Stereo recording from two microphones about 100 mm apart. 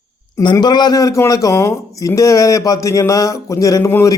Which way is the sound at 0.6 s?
45° left (ahead or behind).